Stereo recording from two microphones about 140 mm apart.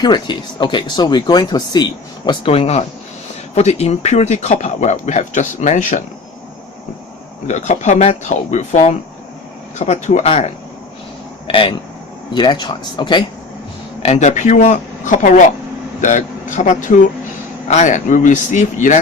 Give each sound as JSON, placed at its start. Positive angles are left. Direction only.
{"t": 0.0, "sound": "speech", "side_deg": 35}
{"t": 7.4, "sound": "speech", "side_deg": 55}
{"t": 11.4, "sound": "speech", "side_deg": 40}
{"t": 14.0, "sound": "speech", "side_deg": 55}